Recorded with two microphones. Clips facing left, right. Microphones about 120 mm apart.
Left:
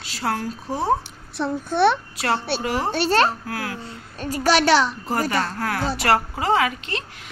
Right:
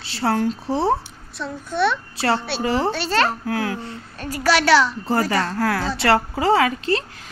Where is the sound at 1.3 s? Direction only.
65° left (ahead or behind).